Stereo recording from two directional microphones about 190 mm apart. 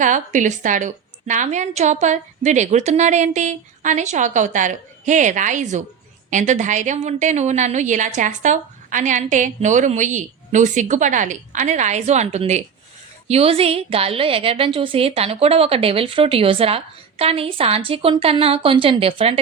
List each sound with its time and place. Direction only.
0.0 s a woman's voice: 40° right (ahead or behind)